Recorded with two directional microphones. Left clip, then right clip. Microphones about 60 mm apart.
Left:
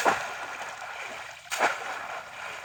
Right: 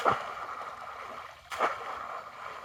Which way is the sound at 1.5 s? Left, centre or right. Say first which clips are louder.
Left 4 dB; right.